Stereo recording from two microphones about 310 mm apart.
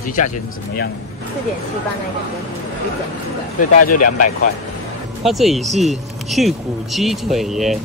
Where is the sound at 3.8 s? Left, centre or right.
Left.